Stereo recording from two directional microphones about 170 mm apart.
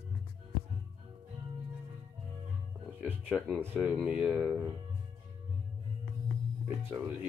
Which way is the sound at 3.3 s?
5° right (ahead or behind).